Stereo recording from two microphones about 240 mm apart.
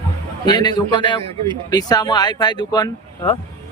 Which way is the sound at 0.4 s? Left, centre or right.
Centre.